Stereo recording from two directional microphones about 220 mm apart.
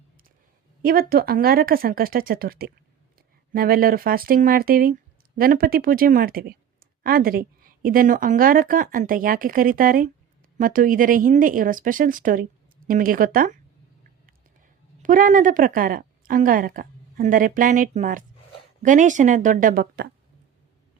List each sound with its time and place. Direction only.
0.8 s a woman's voice: 40° right (ahead or behind)
15.0 s a woman's voice: 35° right (ahead or behind)